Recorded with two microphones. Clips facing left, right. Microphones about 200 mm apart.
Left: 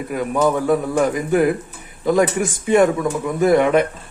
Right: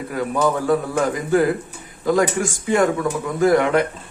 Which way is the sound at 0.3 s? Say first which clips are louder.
Left 2 dB; 20° left (ahead or behind).